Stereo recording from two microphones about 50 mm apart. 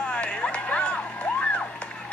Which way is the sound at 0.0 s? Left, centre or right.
Left.